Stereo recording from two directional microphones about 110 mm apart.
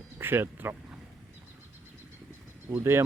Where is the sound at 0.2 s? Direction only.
20° right (ahead or behind).